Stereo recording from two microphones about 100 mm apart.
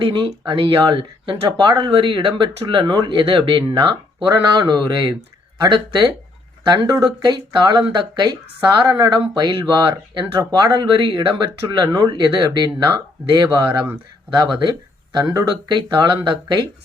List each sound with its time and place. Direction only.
0.0 s speech: 50° right (ahead or behind)
2.9 s speech: 50° right (ahead or behind)
10.7 s speech: 50° right (ahead or behind)
15.1 s speech: 40° right (ahead or behind)